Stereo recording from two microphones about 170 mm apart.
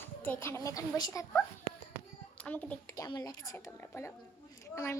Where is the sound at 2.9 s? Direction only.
20° left (ahead or behind).